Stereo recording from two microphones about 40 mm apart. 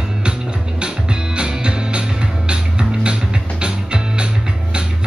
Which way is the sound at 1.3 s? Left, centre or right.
Right.